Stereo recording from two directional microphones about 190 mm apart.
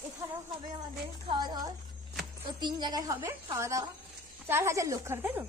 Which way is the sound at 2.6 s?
20° right (ahead or behind).